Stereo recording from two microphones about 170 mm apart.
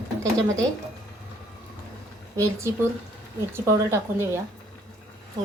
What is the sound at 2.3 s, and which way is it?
Speech, 20° right (ahead or behind).